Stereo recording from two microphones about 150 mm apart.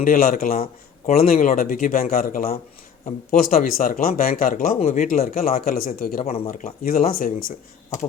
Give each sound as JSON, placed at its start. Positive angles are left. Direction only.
{"t": 0.0, "sound": "a man's voice", "side_deg": 65}
{"t": 4.8, "sound": "a man's voice", "side_deg": 55}
{"t": 6.2, "sound": "speech", "side_deg": 40}
{"t": 6.8, "sound": "a man's voice", "side_deg": 75}